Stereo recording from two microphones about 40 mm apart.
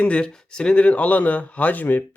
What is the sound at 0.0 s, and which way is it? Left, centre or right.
Speech, left.